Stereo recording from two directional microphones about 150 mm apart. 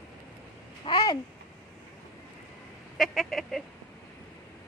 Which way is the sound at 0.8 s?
30° left (ahead or behind).